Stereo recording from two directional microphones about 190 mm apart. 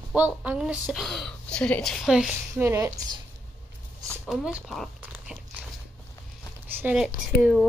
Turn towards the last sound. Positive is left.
turn(degrees=0)  # may be behind; listen again after turning